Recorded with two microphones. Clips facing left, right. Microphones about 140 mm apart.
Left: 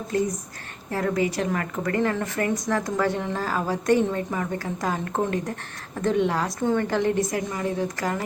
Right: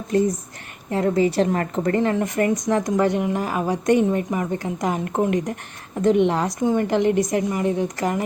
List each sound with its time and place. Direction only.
0.9 s a woman's voice: 25° right (ahead or behind)